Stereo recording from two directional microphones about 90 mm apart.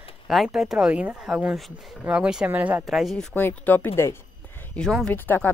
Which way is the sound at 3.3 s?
20° left (ahead or behind).